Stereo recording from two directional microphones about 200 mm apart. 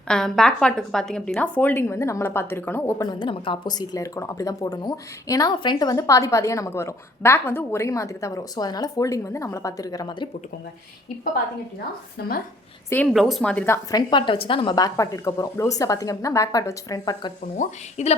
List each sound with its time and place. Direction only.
0.1 s a woman's voice: 5° left (ahead or behind); by 10.2 s 20° left (ahead or behind)
12.9 s a woman's voice: 5° left (ahead or behind)
13.9 s a woman's voice: 25° left (ahead or behind)
17.6 s a woman's voice: 35° left (ahead or behind)